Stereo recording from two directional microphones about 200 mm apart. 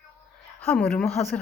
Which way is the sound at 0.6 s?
5° left (ahead or behind).